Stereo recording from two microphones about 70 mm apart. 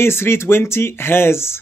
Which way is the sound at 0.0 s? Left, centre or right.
Left.